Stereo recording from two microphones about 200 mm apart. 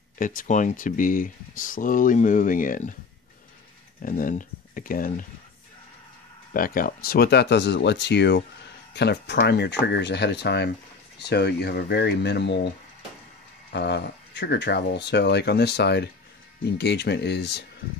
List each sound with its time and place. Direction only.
0.2 s speech: 40° left (ahead or behind)
4.0 s speech: 45° left (ahead or behind)
6.5 s speech: 45° left (ahead or behind)
13.7 s speech: 55° left (ahead or behind)